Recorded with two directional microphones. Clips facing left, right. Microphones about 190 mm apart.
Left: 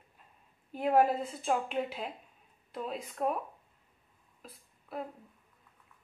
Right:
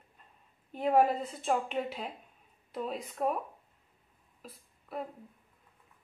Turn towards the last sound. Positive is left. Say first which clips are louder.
# right 1 dB
turn(degrees=0)  # may be behind; listen again after turning